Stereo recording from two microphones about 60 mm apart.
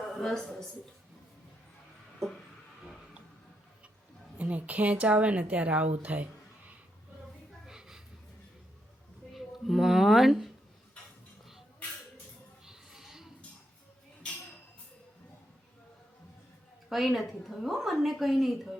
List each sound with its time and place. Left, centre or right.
0.1 s speech: centre
4.4 s speech: right
7.7 s a sound: centre
9.3 s speech: centre
12.6 s a sound: centre
16.9 s a woman's voice: centre